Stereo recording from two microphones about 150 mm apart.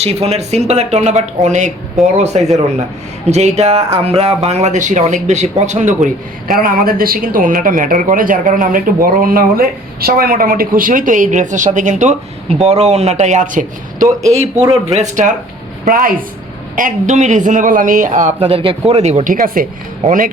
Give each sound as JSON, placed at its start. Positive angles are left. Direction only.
{"t": 0.0, "sound": "speech", "side_deg": -45}
{"t": 6.5, "sound": "speech", "side_deg": -75}
{"t": 14.5, "sound": "speech", "side_deg": -20}
{"t": 14.9, "sound": "a man's voice", "side_deg": -55}
{"t": 15.8, "sound": "speech", "side_deg": -70}
{"t": 16.7, "sound": "a man's voice", "side_deg": -60}
{"t": 18.4, "sound": "a man's voice", "side_deg": -40}